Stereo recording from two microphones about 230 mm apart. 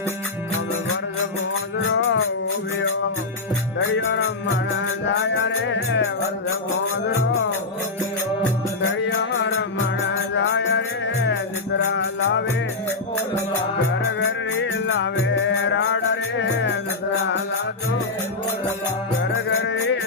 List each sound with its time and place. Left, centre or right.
3.8 s music: left
10.3 s music: left
14.2 s music: left
19.2 s music: left